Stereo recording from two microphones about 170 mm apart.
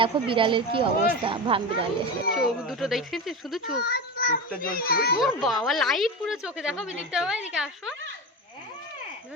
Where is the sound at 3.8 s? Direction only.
65° left (ahead or behind).